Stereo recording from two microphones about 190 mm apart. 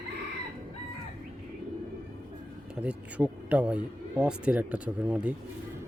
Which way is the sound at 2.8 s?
5° right (ahead or behind).